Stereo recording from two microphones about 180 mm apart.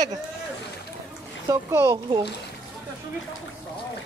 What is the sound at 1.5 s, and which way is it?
Speech, 15° right (ahead or behind).